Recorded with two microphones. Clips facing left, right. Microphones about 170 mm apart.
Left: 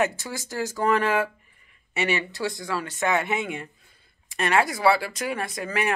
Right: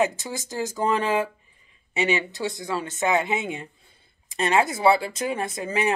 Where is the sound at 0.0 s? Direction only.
20° right (ahead or behind).